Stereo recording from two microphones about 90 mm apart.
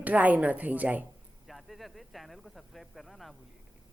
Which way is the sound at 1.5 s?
Centre (ahead or behind).